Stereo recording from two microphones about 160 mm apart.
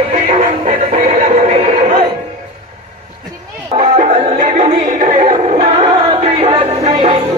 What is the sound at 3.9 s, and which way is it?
Music, 45° right (ahead or behind).